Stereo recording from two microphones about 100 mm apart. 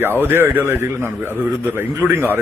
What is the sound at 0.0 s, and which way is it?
A man's voice, 20° right (ahead or behind).